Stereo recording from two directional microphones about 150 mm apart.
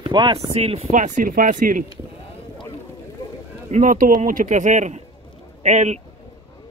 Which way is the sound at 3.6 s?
55° right (ahead or behind).